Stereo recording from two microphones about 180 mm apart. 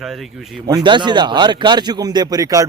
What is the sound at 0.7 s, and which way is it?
A man's voice, 25° right (ahead or behind).